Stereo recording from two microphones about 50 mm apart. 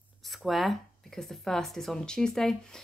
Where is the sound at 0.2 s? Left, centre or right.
Centre.